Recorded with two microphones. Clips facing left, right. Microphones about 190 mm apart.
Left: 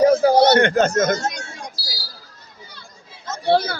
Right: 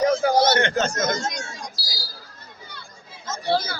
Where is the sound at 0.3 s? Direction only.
60° left (ahead or behind).